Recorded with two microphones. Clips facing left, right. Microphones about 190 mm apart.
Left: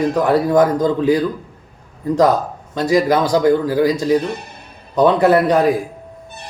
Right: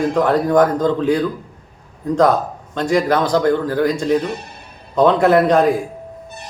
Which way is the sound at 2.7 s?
5° left (ahead or behind).